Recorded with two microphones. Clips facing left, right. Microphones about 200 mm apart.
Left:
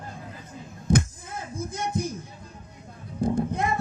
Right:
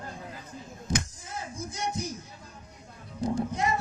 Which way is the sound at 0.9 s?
55° left (ahead or behind).